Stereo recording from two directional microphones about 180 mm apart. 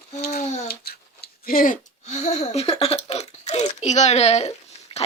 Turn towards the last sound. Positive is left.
turn(degrees=30)  # may be behind; listen again after turning